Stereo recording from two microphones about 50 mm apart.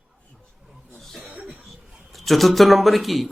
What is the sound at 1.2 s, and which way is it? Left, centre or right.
Cough, right.